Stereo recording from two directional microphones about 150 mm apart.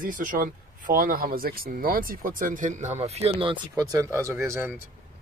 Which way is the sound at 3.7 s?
20° right (ahead or behind).